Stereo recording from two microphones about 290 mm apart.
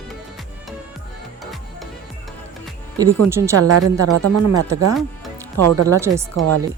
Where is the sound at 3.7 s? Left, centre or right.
Right.